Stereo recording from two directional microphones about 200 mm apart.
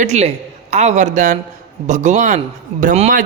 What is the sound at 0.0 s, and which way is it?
A man's voice, 35° right (ahead or behind).